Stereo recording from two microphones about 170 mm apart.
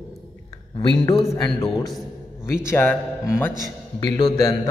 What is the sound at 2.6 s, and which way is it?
Speech, 15° left (ahead or behind).